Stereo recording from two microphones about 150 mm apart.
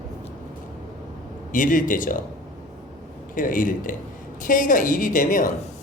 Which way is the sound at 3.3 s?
65° left (ahead or behind).